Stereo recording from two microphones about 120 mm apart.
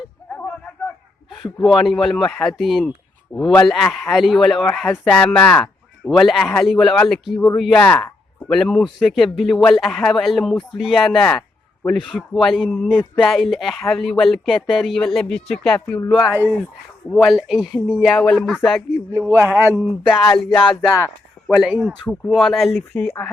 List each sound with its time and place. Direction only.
1.6 s speech: centre (ahead or behind)
5.3 s music: 10° left (ahead or behind)
6.1 s speech: centre (ahead or behind)
7.5 s music: 5° left (ahead or behind)
8.4 s speech: centre (ahead or behind)
19.3 s speech: 20° right (ahead or behind)
20.1 s music: 5° left (ahead or behind)
21.5 s speech: 5° right (ahead or behind)
23.0 s speech: 20° left (ahead or behind)